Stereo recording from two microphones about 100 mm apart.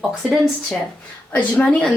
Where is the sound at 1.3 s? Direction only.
15° left (ahead or behind).